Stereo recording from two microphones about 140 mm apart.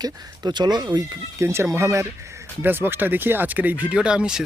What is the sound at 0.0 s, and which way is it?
Speech, 30° right (ahead or behind).